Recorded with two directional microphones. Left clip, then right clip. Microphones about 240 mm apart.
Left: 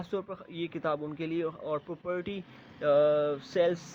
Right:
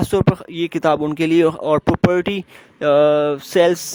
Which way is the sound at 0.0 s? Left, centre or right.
Right.